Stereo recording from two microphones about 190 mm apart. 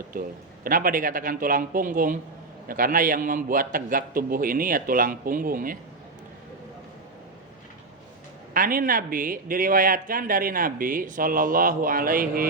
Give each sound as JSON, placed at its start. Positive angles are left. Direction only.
{"t": 0.6, "sound": "a man's voice", "side_deg": -50}
{"t": 8.5, "sound": "a man's voice", "side_deg": -45}